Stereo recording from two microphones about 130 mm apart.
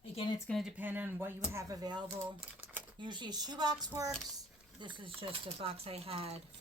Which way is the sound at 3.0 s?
35° right (ahead or behind).